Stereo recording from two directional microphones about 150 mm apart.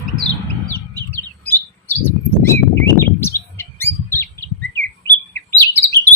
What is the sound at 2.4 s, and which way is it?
Bird, 15° left (ahead or behind).